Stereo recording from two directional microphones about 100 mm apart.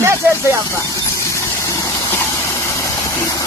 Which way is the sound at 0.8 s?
35° left (ahead or behind).